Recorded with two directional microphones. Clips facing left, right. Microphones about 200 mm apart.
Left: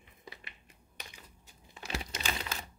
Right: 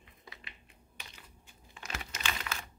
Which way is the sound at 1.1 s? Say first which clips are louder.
Left 1 dB; 40° left (ahead or behind).